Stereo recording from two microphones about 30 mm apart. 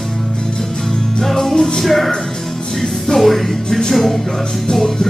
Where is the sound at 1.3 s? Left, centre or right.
Left.